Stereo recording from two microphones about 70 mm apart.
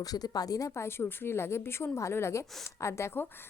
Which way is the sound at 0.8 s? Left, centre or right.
Left.